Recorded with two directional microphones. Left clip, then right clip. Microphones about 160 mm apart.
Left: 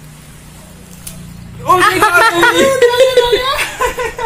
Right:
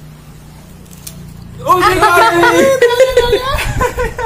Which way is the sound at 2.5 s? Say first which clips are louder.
Right 1 dB; 50° right (ahead or behind).